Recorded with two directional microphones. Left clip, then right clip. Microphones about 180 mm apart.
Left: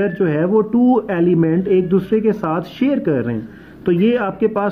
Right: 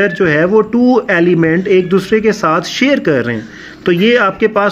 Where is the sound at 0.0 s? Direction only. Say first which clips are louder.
Right 6 dB; 5° right (ahead or behind).